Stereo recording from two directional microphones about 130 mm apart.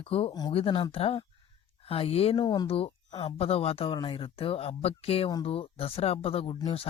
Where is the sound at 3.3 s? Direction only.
50° left (ahead or behind).